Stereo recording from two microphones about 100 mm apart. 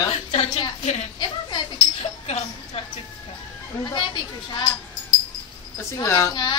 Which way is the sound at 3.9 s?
50° left (ahead or behind).